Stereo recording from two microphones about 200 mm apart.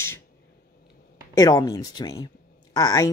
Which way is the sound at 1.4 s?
20° left (ahead or behind).